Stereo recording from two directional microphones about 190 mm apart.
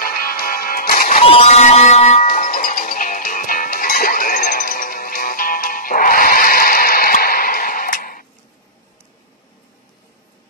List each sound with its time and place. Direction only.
0.0 s music: 50° left (ahead or behind)
1.2 s a sound: 35° left (ahead or behind)
2.2 s music: 45° left (ahead or behind)